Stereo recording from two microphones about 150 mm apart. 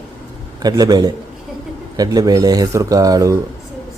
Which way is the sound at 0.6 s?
25° right (ahead or behind).